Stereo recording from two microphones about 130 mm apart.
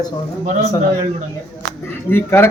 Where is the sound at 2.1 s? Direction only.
15° left (ahead or behind).